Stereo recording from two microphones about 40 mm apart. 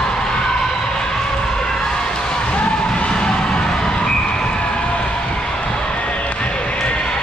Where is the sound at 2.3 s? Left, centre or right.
Left.